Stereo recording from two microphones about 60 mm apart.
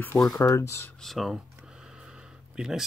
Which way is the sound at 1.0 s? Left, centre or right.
Centre.